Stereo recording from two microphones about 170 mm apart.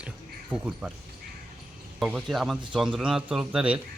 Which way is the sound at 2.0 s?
5° right (ahead or behind).